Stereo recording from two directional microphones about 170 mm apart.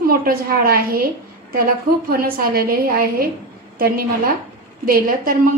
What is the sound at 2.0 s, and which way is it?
A woman's voice, 60° right (ahead or behind).